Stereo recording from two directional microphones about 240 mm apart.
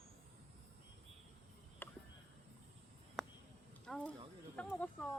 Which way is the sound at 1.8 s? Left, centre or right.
Centre.